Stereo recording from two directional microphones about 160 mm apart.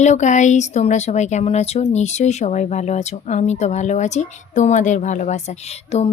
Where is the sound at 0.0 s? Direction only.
45° left (ahead or behind).